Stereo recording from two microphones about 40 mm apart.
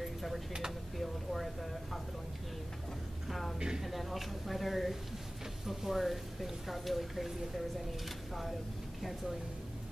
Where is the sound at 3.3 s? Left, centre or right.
Centre.